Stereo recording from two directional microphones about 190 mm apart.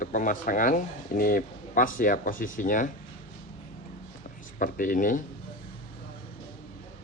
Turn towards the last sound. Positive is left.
turn(degrees=45)  # may be behind; listen again after turning